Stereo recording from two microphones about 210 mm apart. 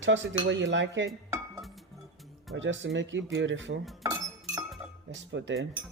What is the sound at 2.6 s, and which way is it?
Speech, 60° right (ahead or behind).